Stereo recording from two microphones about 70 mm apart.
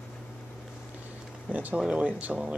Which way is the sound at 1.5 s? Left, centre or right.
Right.